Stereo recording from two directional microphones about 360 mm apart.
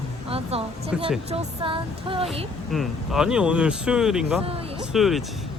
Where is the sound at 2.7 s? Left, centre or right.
Centre.